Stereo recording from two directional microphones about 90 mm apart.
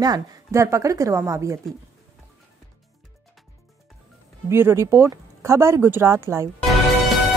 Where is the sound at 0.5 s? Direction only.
35° right (ahead or behind).